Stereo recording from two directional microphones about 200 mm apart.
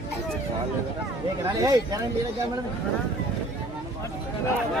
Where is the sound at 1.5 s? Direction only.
20° right (ahead or behind).